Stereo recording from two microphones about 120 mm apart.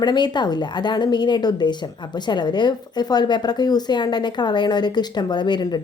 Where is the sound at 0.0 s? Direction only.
40° left (ahead or behind).